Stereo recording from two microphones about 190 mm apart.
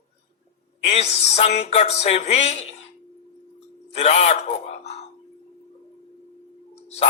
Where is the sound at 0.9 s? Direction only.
35° left (ahead or behind).